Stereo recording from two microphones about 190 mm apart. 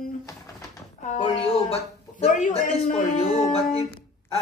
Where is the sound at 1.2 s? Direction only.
30° left (ahead or behind).